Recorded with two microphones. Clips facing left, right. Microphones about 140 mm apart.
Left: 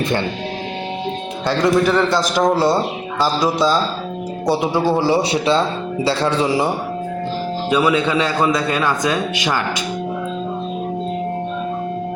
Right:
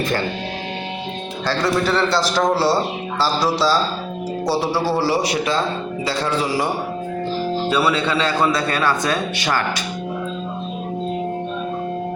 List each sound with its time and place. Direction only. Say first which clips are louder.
1.5 s a man's voice: left 4 dB; 15° left (ahead or behind)
7.7 s a man's voice: left 5 dB; 15° left (ahead or behind)